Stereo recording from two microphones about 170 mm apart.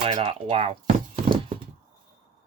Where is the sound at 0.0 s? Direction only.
35° right (ahead or behind).